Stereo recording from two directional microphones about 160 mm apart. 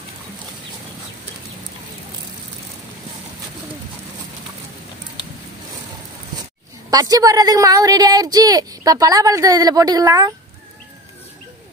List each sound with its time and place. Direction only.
6.9 s speech: 25° right (ahead or behind)